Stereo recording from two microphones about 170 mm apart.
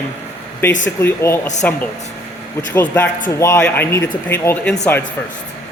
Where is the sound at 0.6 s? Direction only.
15° left (ahead or behind).